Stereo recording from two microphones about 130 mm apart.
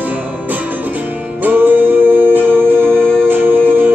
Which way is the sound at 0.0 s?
10° right (ahead or behind).